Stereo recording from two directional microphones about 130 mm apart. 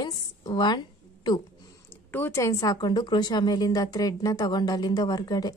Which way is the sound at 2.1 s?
20° left (ahead or behind).